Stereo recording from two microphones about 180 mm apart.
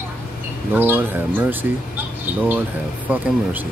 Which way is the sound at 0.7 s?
10° right (ahead or behind).